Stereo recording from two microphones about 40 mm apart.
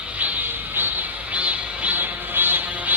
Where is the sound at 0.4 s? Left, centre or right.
Right.